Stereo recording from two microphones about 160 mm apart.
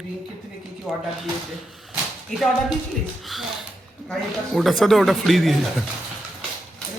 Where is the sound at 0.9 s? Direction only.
5° right (ahead or behind).